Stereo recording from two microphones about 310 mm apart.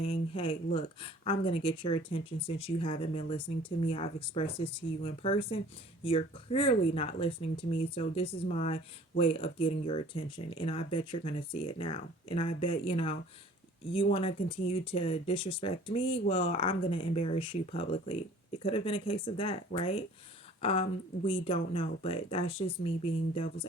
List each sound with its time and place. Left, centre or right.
0.0 s speech: centre